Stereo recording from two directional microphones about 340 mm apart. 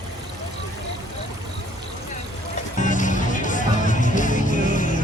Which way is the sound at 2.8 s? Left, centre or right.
Left.